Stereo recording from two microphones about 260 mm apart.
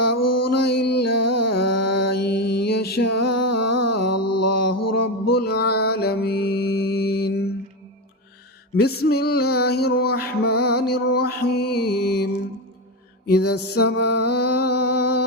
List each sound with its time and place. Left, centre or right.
0.0 s mantra: left
0.8 s music: left
1.0 s music: left
2.5 s mantra: left
5.3 s music: left
8.7 s music: left
13.2 s music: left
13.9 s mantra: left